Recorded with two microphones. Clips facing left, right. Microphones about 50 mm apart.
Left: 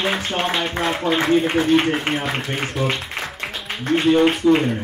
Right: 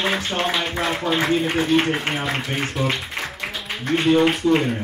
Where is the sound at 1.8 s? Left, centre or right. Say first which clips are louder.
Left 1 dB; centre.